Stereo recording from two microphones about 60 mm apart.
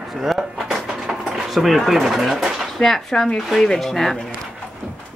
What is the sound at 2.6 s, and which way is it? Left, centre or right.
Speech, centre.